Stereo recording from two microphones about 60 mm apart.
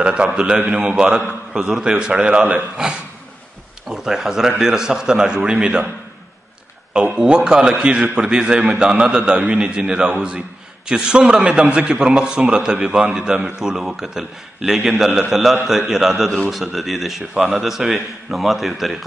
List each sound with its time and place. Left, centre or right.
0.0 s a sound: centre
0.3 s a man's voice: centre
3.9 s a man's voice: centre
6.9 s a man's voice: centre